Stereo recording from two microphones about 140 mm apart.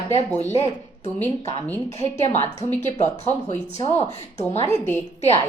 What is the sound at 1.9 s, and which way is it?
Speech, 50° left (ahead or behind).